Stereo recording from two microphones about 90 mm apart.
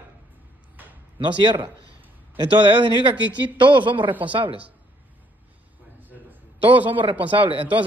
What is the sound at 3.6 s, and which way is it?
Speech, 65° right (ahead or behind).